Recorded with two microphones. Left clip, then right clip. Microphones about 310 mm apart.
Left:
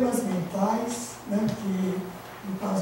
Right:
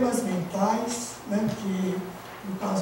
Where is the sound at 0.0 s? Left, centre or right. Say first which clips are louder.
Even; centre.